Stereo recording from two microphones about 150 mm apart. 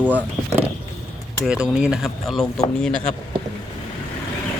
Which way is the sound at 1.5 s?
5° right (ahead or behind).